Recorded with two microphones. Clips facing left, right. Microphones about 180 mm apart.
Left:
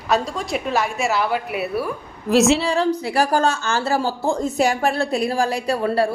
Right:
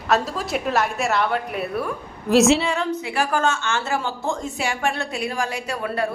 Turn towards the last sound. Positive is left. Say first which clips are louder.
# left 6 dB
turn(degrees=35)  # may be behind; listen again after turning